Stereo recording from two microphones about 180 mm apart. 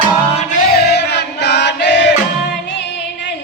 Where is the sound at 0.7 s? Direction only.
60° left (ahead or behind).